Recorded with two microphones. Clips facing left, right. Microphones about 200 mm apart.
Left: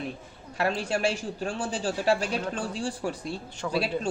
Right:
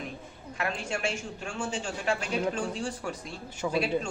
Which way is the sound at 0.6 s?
35° left (ahead or behind).